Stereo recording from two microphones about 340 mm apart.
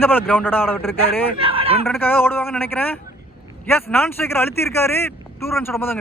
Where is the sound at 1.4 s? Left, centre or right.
Centre.